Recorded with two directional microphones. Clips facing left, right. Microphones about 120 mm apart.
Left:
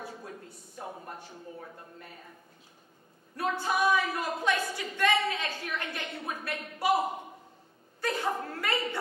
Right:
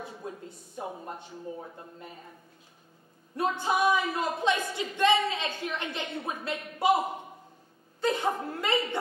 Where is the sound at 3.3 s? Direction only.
20° right (ahead or behind).